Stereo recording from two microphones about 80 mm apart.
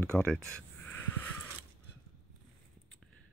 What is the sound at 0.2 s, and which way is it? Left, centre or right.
Speech, centre.